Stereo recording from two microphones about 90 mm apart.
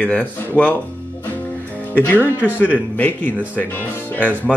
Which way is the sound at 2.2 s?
20° right (ahead or behind).